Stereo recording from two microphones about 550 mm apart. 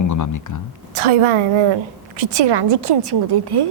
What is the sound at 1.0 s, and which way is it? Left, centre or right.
A woman's voice, right.